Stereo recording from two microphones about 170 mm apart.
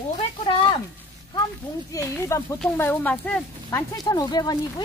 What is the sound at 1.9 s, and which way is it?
Speech, 15° left (ahead or behind).